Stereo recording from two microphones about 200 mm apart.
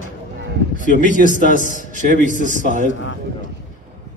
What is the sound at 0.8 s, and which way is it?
A man's voice, 40° right (ahead or behind).